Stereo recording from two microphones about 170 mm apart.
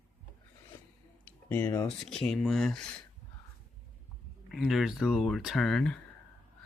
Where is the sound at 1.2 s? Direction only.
15° left (ahead or behind).